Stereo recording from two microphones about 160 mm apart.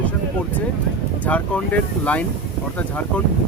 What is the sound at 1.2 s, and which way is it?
Speech, 10° left (ahead or behind).